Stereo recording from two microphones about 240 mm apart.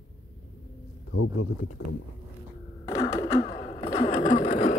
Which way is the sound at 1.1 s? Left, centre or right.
Left.